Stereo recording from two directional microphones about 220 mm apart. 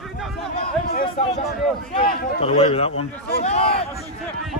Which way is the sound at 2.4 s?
25° left (ahead or behind).